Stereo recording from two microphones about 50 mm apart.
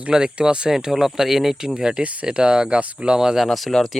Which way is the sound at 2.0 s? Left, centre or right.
Right.